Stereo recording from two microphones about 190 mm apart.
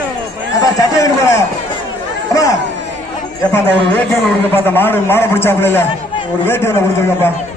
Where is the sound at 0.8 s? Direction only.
15° left (ahead or behind).